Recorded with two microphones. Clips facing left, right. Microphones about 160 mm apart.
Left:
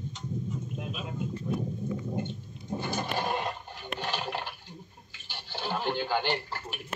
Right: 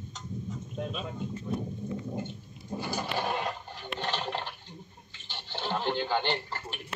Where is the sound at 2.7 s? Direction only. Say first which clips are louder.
Left 1 dB; 20° left (ahead or behind).